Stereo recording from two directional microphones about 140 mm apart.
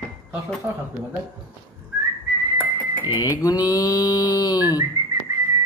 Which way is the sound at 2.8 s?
35° left (ahead or behind).